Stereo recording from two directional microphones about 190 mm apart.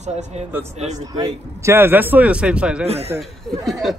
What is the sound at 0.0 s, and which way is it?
Speech, 35° right (ahead or behind).